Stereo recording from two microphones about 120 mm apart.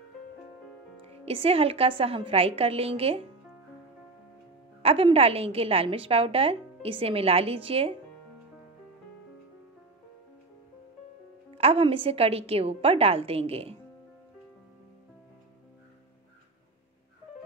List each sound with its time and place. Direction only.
1.0 s a woman's voice: 55° right (ahead or behind)
4.8 s a woman's voice: 55° right (ahead or behind)
11.5 s a woman's voice: 50° right (ahead or behind)